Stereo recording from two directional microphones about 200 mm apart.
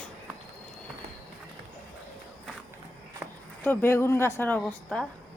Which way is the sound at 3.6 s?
10° left (ahead or behind).